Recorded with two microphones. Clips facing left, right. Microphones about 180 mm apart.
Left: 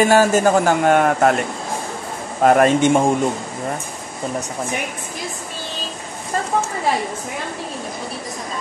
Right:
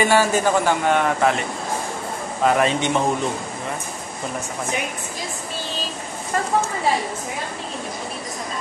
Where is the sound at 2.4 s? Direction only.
50° left (ahead or behind).